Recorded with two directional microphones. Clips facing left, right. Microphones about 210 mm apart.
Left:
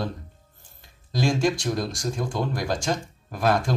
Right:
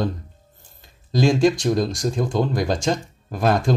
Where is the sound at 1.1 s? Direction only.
20° right (ahead or behind).